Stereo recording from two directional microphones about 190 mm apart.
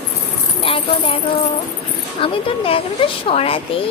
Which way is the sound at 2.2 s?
30° left (ahead or behind).